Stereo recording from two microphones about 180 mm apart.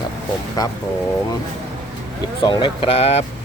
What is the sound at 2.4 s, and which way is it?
Speech, 25° left (ahead or behind).